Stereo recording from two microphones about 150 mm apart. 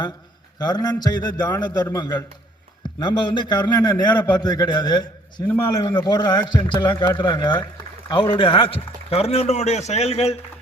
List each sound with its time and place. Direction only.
0.6 s a man's voice: 25° left (ahead or behind)
5.5 s a man's voice: 15° left (ahead or behind)
6.1 s a man's voice: 30° left (ahead or behind)